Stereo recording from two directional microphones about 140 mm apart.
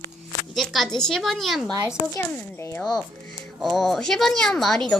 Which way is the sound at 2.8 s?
Centre (ahead or behind).